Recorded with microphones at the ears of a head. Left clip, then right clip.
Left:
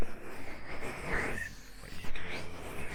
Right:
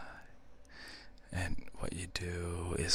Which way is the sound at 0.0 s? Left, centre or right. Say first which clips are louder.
Left 8 dB; left.